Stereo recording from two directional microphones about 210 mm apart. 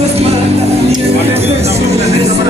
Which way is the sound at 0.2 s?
30° right (ahead or behind).